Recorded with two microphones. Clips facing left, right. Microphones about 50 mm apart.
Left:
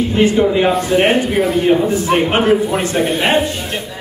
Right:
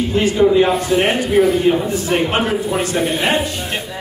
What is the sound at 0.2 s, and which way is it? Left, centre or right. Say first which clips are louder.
A man's voice: even; left.